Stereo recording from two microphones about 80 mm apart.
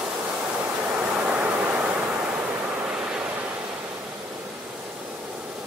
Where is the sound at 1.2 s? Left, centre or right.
Centre.